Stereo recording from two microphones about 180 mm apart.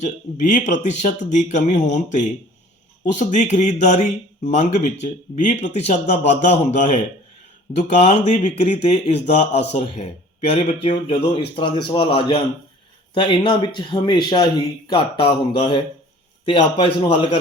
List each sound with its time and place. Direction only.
0.0 s a man's voice: 40° left (ahead or behind)